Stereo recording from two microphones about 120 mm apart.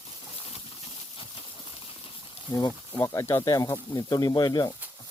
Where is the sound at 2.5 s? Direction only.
30° left (ahead or behind).